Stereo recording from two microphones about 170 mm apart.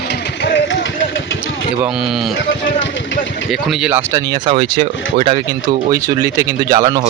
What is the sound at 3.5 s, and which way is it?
Speech, 5° right (ahead or behind).